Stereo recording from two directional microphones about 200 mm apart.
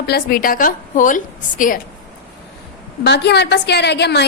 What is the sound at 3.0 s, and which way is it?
A woman's voice, 55° left (ahead or behind).